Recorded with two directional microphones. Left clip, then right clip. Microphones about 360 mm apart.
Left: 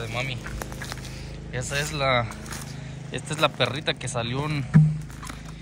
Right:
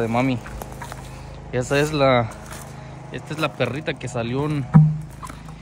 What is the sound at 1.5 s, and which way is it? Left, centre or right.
Speech, centre.